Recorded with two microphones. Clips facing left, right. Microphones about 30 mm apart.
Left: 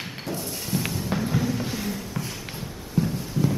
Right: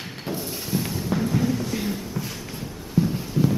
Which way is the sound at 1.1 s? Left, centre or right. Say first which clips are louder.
Right 3 dB; centre.